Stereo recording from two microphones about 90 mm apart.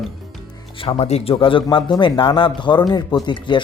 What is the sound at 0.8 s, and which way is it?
Speech, 85° left.